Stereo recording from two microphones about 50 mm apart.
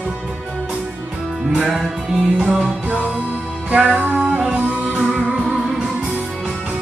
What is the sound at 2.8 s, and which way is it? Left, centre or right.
Music, right.